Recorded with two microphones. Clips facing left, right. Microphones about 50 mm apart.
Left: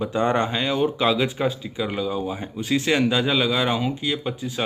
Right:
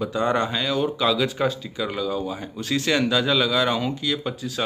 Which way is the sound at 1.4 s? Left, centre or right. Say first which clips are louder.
Even; centre.